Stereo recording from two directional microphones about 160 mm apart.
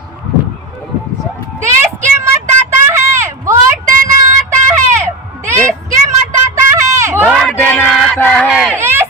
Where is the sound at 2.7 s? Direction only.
15° right (ahead or behind).